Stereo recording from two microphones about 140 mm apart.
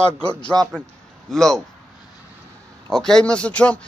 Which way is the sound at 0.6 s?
30° right (ahead or behind).